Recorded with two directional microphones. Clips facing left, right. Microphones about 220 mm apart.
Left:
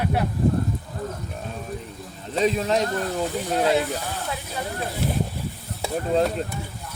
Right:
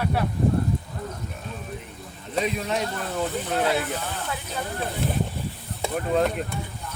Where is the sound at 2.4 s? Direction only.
35° left (ahead or behind).